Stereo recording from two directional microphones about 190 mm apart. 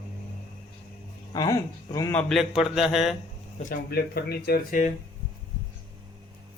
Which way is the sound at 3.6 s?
50° left (ahead or behind).